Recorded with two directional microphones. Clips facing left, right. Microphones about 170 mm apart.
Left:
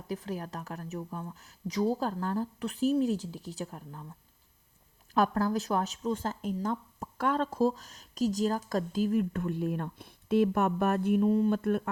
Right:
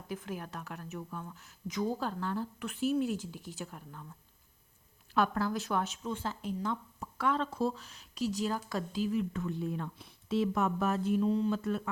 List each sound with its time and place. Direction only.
0.1 s a woman's voice: 40° left (ahead or behind)
5.1 s speech: 40° left (ahead or behind); by 11.8 s 55° left (ahead or behind)